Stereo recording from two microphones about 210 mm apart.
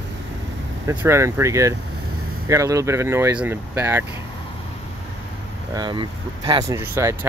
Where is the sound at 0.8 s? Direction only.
15° right (ahead or behind).